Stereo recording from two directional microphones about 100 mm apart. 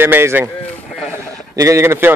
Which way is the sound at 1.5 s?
30° right (ahead or behind).